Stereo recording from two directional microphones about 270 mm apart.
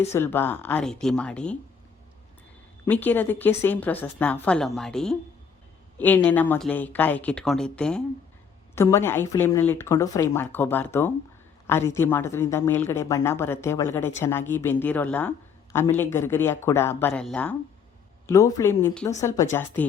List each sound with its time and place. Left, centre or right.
0.1 s speech: centre
2.8 s a woman's voice: centre